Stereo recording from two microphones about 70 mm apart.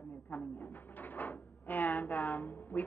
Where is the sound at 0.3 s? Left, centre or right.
Left.